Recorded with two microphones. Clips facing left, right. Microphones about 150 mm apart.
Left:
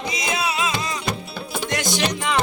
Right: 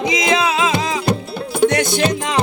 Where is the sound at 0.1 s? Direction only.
90° right.